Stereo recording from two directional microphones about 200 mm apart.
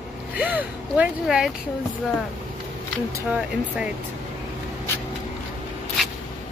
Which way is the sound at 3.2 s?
5° right (ahead or behind).